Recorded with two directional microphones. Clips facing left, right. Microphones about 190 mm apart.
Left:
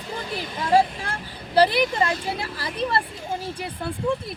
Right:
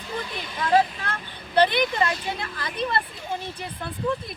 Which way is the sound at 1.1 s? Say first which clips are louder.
Left 2 dB; 35° left (ahead or behind).